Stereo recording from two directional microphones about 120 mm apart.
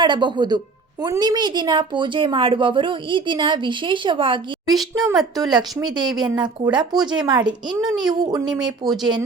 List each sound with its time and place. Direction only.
0.0 s a woman's voice: 40° right (ahead or behind)
4.9 s a woman's voice: 30° right (ahead or behind)